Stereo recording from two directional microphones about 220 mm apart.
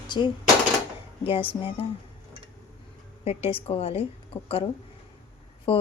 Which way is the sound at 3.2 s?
25° left (ahead or behind).